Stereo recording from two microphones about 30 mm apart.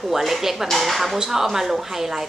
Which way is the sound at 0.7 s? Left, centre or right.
Centre.